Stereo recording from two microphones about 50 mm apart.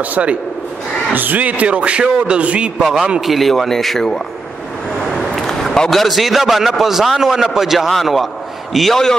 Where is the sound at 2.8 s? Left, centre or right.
Centre.